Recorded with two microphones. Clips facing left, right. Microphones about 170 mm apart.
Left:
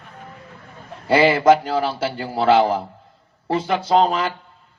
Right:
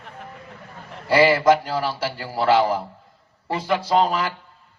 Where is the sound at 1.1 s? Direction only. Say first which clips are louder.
Left 2 dB; 25° left (ahead or behind).